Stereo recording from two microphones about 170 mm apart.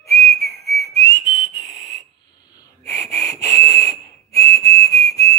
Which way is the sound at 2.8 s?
20° left (ahead or behind).